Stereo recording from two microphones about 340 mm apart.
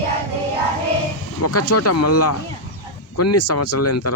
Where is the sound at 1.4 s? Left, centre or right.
Left.